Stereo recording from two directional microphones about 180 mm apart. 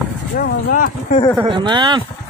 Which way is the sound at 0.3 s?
55° left (ahead or behind).